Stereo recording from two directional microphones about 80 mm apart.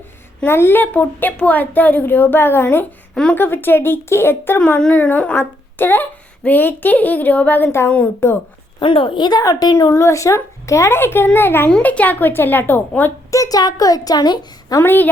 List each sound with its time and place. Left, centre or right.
0.4 s speech: left
4.6 s a woman's voice: centre
8.8 s a woman's voice: left
13.3 s a woman's voice: left
14.8 s speech: left